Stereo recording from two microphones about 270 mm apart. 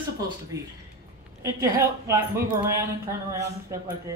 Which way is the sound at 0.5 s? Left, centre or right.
Centre.